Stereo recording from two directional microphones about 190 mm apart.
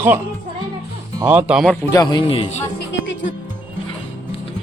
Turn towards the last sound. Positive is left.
turn(degrees=75)  # may be behind; listen again after turning